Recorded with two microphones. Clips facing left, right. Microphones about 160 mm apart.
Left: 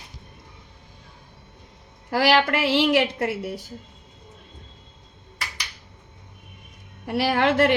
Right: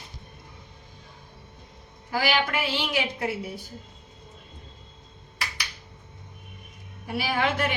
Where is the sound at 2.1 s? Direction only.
80° left.